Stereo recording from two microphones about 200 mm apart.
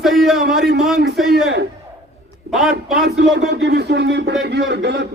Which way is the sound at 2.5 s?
Centre (ahead or behind).